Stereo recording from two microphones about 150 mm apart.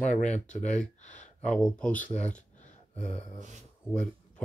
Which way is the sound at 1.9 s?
55° left (ahead or behind).